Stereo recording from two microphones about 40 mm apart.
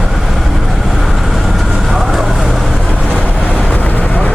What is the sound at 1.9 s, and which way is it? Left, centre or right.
Vehicle, centre.